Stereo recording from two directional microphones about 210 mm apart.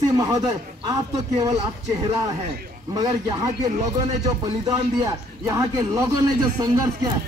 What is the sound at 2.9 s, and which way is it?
A man's voice, 20° right (ahead or behind).